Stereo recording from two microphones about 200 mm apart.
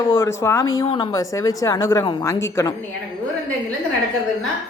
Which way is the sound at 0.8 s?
25° left (ahead or behind).